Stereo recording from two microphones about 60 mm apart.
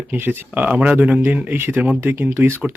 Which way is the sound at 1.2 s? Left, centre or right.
Right.